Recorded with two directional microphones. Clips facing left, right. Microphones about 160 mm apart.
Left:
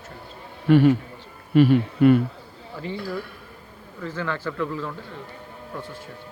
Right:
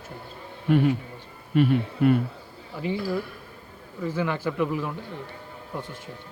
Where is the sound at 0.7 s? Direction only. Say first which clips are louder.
Left 5 dB; 85° left.